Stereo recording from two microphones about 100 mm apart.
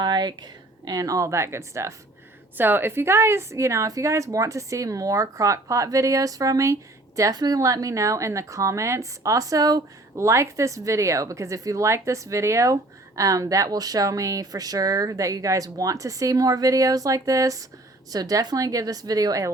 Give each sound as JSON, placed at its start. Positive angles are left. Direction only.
{"t": 0.0, "sound": "speech", "side_deg": -45}